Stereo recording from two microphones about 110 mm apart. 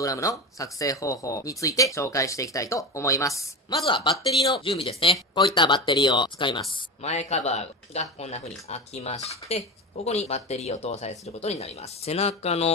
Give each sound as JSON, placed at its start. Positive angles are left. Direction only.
{"t": 0.0, "sound": "speech", "side_deg": 30}
{"t": 3.7, "sound": "speech", "side_deg": 50}
{"t": 7.0, "sound": "speech", "side_deg": 80}